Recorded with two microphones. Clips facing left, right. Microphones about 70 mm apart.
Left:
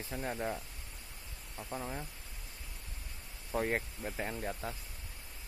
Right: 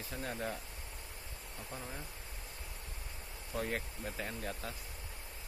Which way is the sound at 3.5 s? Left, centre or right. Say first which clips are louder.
Left 4 dB; left.